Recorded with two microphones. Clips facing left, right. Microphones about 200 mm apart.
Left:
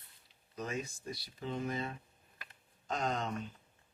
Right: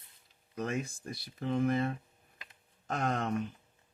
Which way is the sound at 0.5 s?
55° right (ahead or behind).